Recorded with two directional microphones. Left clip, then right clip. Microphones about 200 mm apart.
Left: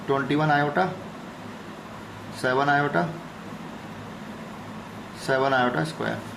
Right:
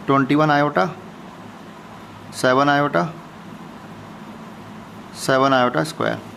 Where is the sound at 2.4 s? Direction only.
35° right (ahead or behind).